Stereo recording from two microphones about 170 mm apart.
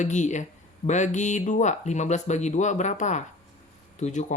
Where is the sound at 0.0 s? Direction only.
45° left (ahead or behind).